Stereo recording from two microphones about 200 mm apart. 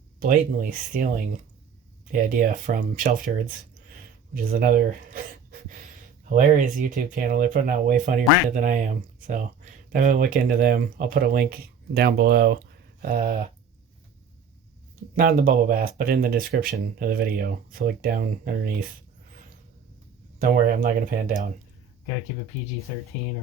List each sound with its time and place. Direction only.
0.2 s speech: 45° right (ahead or behind)
4.5 s speech: 45° right (ahead or behind)
15.1 s speech: 45° right (ahead or behind)
20.4 s speech: 45° right (ahead or behind)